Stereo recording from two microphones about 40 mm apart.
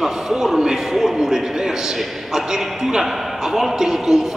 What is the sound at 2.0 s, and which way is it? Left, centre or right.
A man's voice, centre.